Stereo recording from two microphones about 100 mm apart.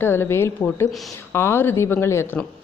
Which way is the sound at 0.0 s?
25° left (ahead or behind).